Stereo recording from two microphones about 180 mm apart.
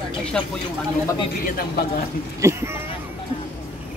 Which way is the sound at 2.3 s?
15° right (ahead or behind).